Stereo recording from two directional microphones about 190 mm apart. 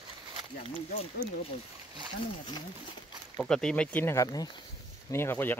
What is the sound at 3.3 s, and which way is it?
Speech, 5° left (ahead or behind).